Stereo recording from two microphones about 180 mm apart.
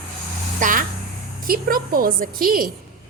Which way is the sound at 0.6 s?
45° right (ahead or behind).